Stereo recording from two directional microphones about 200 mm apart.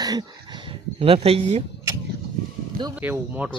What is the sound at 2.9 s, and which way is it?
Speech, 10° right (ahead or behind).